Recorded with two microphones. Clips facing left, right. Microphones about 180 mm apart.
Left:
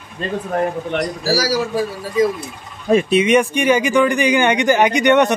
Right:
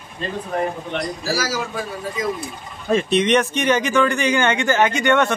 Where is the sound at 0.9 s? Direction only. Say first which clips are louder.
Left 5 dB; 35° left (ahead or behind).